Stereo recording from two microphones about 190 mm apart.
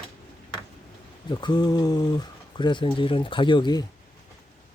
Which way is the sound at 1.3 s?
25° left (ahead or behind).